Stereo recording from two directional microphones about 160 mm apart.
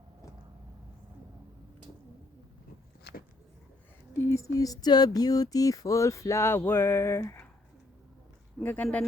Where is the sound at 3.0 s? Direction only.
75° left (ahead or behind).